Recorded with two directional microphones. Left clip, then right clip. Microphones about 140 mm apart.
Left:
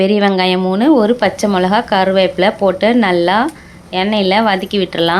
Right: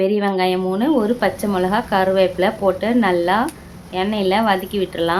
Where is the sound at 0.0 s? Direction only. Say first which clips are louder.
Left 5 dB; 30° left (ahead or behind).